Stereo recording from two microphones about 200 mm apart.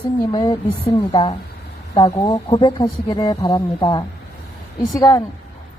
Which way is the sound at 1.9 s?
20° left (ahead or behind).